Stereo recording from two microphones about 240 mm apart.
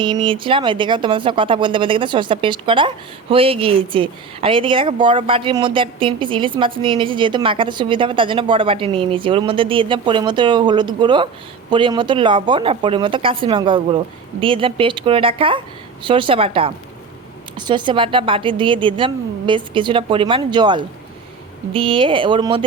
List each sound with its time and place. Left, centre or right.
0.0 s speech: right